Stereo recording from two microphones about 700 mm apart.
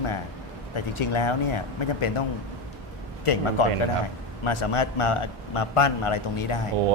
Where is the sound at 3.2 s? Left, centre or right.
Left.